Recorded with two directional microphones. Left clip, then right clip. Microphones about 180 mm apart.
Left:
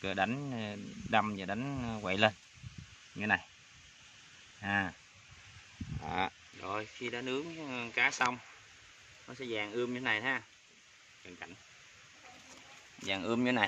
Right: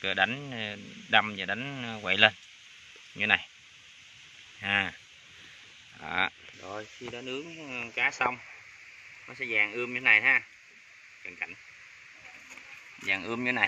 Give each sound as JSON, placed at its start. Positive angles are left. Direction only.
{"t": 0.0, "sound": "speech", "side_deg": 5}
{"t": 3.2, "sound": "speech", "side_deg": -5}
{"t": 4.6, "sound": "speech", "side_deg": -5}
{"t": 6.0, "sound": "speech", "side_deg": 10}
{"t": 6.6, "sound": "speech", "side_deg": 20}
{"t": 7.2, "sound": "speech", "side_deg": 10}
{"t": 13.0, "sound": "speech", "side_deg": 25}